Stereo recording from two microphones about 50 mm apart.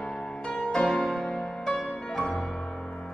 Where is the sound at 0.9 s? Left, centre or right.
Centre.